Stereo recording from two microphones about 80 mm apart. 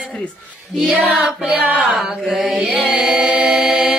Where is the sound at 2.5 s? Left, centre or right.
Centre.